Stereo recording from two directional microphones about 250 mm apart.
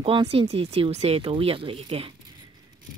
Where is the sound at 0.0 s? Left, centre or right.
Right.